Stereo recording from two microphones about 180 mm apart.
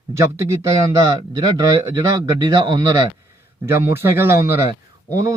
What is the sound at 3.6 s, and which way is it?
Speech, 15° right (ahead or behind).